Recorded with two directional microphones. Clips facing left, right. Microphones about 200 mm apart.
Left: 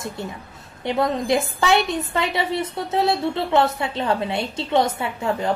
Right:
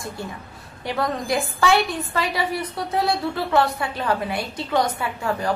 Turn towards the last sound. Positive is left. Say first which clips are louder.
# left 1 dB
turn(degrees=25)  # may be behind; listen again after turning